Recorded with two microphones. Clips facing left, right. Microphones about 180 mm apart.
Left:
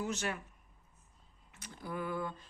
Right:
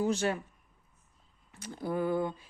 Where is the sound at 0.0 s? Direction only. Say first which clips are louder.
Right 8 dB; 30° right (ahead or behind).